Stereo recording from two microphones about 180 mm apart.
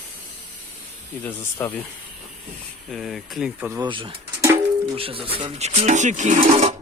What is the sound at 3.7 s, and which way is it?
Speech, 25° right (ahead or behind).